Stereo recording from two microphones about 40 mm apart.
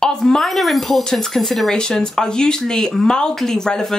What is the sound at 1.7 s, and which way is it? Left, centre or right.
Speech, centre.